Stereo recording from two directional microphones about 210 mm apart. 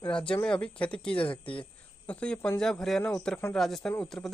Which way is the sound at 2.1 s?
5° left (ahead or behind).